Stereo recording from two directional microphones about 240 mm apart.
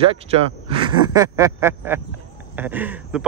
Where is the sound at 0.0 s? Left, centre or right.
Right.